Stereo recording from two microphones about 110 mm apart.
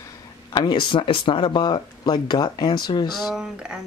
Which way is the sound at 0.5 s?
45° left (ahead or behind).